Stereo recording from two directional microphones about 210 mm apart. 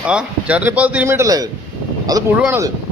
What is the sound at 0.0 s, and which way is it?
A man's voice, 5° right (ahead or behind).